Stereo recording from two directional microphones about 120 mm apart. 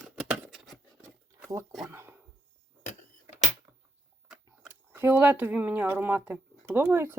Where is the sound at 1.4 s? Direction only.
25° right (ahead or behind).